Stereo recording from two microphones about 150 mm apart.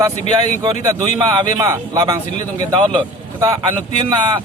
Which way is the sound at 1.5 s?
25° right (ahead or behind).